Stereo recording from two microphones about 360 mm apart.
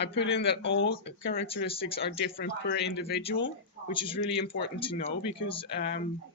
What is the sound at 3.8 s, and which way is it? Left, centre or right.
Speech, centre.